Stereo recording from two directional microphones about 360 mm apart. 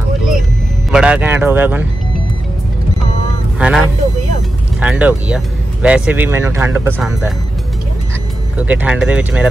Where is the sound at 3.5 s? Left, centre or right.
Centre.